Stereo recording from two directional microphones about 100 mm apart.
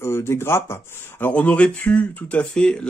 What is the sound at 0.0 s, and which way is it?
Speech, 25° left (ahead or behind).